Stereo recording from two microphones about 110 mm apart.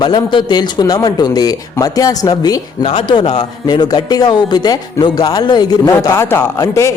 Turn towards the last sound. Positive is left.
turn(degrees=25)  # may be behind; listen again after turning